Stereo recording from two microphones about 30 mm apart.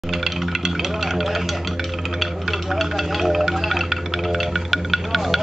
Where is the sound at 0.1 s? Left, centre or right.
Centre.